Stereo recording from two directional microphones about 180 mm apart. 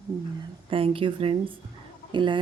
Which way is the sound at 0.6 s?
30° right (ahead or behind).